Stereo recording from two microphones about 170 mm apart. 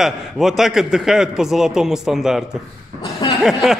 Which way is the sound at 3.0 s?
25° left (ahead or behind).